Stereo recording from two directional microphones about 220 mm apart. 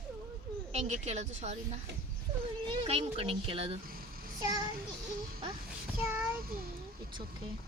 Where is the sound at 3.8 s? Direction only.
40° right (ahead or behind).